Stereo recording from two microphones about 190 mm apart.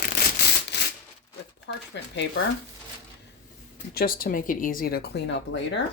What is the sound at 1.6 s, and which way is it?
Speech, 70° left (ahead or behind).